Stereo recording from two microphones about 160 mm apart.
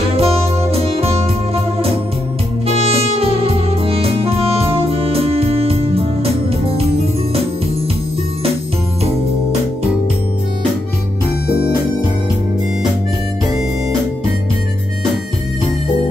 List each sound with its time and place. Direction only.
0.1 s music: 40° right (ahead or behind)